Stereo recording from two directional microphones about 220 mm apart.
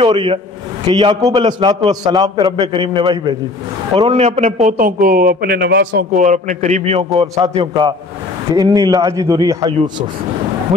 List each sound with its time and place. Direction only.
0.0 s a man's voice: 25° right (ahead or behind); by 6.0 s 50° right (ahead or behind)
6.2 s a man's voice: 35° right (ahead or behind); by 10.0 s 20° right (ahead or behind)